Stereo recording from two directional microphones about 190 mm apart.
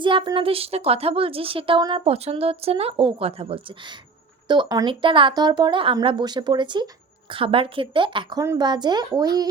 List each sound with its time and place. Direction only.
0.0 s a woman's voice: 25° right (ahead or behind)